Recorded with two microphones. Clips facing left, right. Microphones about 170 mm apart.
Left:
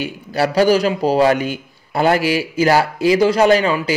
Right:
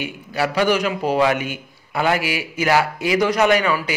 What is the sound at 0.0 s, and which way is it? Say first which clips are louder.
A man's voice: left 4 dB; 35° left (ahead or behind).